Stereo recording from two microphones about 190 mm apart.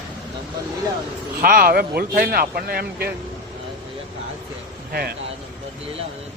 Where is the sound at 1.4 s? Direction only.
50° right (ahead or behind).